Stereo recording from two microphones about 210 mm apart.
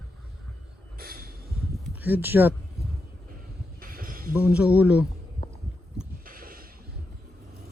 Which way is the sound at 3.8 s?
40° right (ahead or behind).